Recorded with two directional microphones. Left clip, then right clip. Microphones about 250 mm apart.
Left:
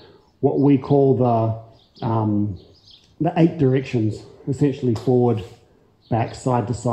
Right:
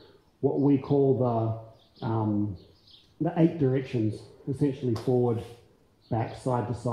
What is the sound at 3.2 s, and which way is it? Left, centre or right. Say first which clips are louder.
Speech: left 7 dB; left.